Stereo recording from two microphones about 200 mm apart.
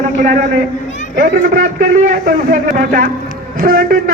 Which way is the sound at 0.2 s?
40° right (ahead or behind).